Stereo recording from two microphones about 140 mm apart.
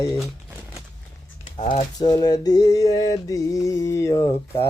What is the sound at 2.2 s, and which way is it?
Mantra, 25° left (ahead or behind).